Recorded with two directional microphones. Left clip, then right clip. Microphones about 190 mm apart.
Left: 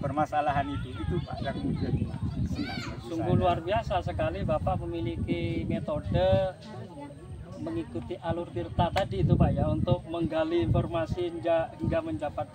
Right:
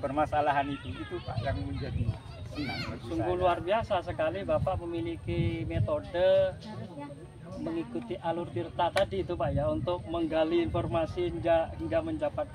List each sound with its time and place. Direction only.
0.0 s speech: 15° right (ahead or behind)
2.5 s a child's voice: 35° right (ahead or behind)
3.2 s speech: centre (ahead or behind)
8.1 s speech: centre (ahead or behind)